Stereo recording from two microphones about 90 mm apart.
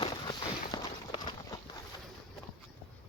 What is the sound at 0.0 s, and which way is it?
Walk, 50° left (ahead or behind).